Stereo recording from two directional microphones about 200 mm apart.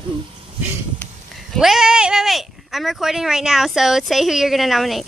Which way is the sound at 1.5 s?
Centre (ahead or behind).